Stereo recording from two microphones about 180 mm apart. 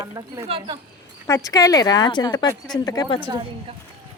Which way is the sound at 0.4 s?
30° right (ahead or behind).